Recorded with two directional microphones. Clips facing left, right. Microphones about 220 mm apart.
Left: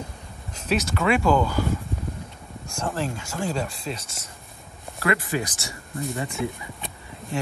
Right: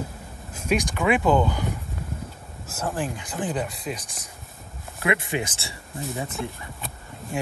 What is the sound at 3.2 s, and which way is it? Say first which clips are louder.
Speech: even; 20° right (ahead or behind).